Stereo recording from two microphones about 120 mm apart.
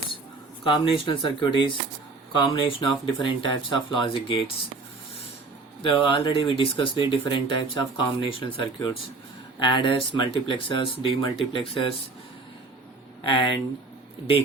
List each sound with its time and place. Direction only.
0.6 s speech: 45° left (ahead or behind)
5.8 s speech: 45° left (ahead or behind)
13.2 s speech: 45° left (ahead or behind)